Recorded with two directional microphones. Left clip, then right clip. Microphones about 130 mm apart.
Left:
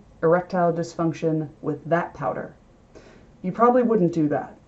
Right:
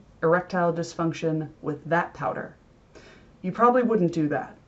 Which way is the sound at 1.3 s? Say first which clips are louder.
Left 3 dB; 15° right (ahead or behind).